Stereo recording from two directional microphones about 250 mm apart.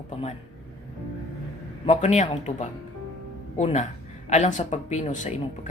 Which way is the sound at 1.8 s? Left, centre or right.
Left.